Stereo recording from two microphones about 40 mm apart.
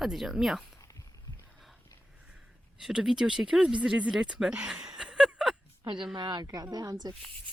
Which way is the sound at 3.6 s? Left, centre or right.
Right.